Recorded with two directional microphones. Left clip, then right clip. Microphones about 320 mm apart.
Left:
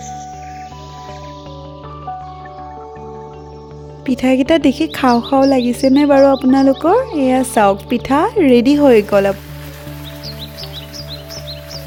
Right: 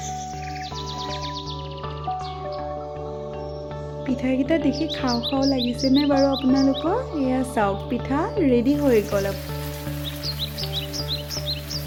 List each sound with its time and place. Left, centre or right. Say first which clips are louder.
4.0 s speech: left 10 dB; left
10.2 s music: right 1 dB; centre